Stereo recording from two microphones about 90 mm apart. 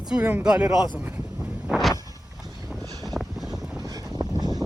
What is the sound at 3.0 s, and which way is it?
Wind noise, centre (ahead or behind).